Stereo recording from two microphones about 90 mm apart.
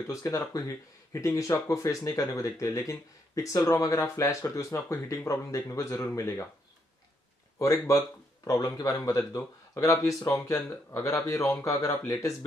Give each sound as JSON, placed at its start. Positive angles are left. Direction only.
{"t": 0.0, "sound": "speech", "side_deg": 35}
{"t": 7.5, "sound": "speech", "side_deg": 35}